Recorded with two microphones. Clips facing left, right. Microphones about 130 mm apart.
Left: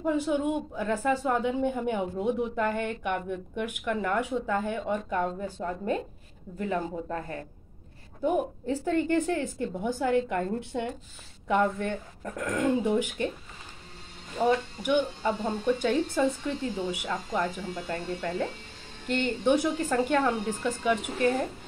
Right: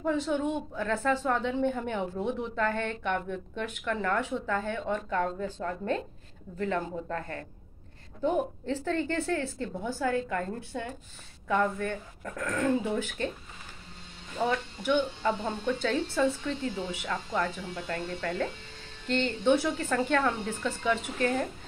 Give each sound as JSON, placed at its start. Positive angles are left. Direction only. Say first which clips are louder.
{"t": 0.0, "sound": "a woman's voice", "louder": "left 2 dB", "side_deg": 10}
{"t": 14.8, "sound": "a woman's voice", "louder": "left 1 dB", "side_deg": 10}